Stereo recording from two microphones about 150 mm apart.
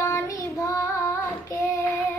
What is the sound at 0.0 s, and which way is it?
Child singing, 20° left (ahead or behind).